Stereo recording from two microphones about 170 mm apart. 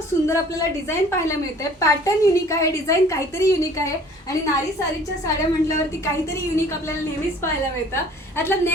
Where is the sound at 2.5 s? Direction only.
15° left (ahead or behind).